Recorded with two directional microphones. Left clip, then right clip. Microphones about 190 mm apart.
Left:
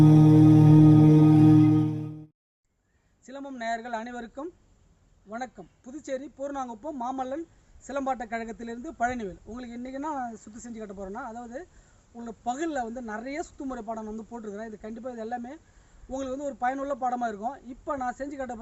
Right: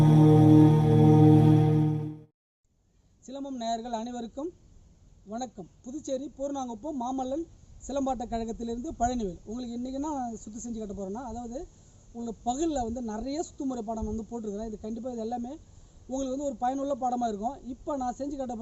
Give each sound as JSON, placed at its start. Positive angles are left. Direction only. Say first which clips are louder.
{"t": 0.0, "sound": "music", "louder": "left 3 dB", "side_deg": 0}
{"t": 3.2, "sound": "a man's voice", "louder": "even", "side_deg": 0}
{"t": 5.8, "sound": "a man's voice", "louder": "right 1 dB", "side_deg": 5}
{"t": 10.9, "sound": "speech", "louder": "left 3 dB", "side_deg": 20}
{"t": 12.5, "sound": "a man's voice", "louder": "even", "side_deg": 5}
{"t": 14.0, "sound": "speech", "louder": "right 2 dB", "side_deg": 20}
{"t": 14.4, "sound": "a man's voice", "louder": "right 2 dB", "side_deg": 5}